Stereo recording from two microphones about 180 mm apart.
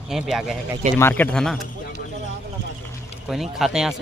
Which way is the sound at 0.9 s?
10° left (ahead or behind).